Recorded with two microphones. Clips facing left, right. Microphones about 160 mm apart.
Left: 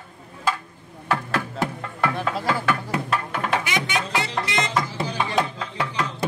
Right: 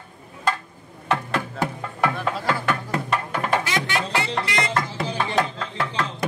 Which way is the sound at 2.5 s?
10° left (ahead or behind).